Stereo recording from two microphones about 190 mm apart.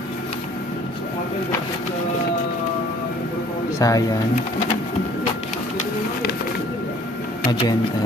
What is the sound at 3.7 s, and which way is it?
Speech, 20° left (ahead or behind).